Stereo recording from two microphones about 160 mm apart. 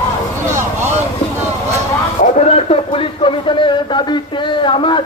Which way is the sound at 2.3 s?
40° left (ahead or behind).